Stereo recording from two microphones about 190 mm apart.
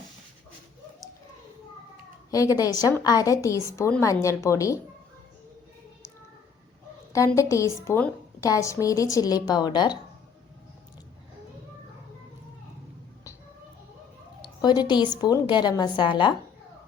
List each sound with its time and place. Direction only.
2.3 s a woman's voice: 20° left (ahead or behind)
7.1 s a woman's voice: 15° left (ahead or behind)
14.4 s a sound: 20° left (ahead or behind)
15.2 s a woman's voice: 25° left (ahead or behind)